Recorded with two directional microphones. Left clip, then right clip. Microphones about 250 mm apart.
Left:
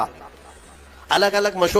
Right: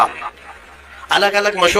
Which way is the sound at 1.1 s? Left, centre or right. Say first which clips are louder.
Right 4 dB; centre.